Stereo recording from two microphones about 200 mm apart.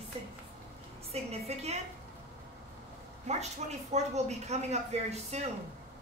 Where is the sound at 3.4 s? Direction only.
35° right (ahead or behind).